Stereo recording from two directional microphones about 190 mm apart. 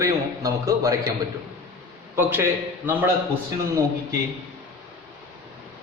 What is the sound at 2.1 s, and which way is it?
Speech, 10° right (ahead or behind).